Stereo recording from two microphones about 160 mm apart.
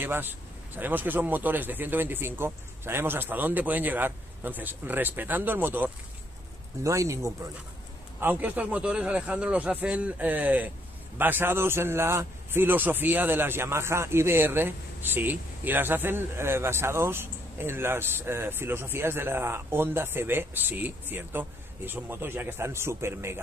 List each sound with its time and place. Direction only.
0.0 s a man's voice: 15° right (ahead or behind)